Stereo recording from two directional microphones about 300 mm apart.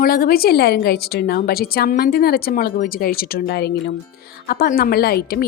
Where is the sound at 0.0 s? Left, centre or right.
Left.